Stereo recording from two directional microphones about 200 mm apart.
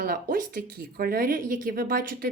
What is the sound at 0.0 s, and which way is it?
A woman's voice, 45° right (ahead or behind).